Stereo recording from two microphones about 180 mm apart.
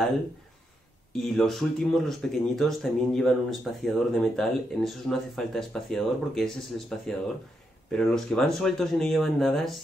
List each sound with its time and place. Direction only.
1.1 s speech: centre (ahead or behind)